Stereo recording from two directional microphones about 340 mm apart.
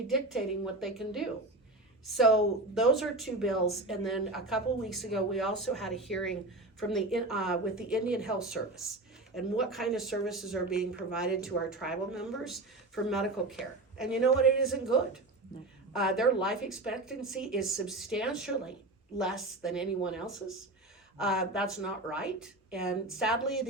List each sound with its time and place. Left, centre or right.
0.1 s speech: centre